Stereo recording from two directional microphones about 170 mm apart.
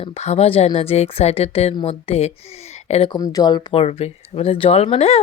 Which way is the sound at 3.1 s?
20° left (ahead or behind).